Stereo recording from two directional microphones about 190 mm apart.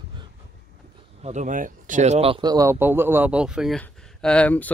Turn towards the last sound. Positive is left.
turn(degrees=10)  # may be behind; listen again after turning